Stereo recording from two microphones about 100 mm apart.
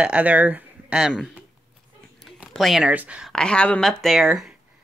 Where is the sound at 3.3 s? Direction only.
10° left (ahead or behind).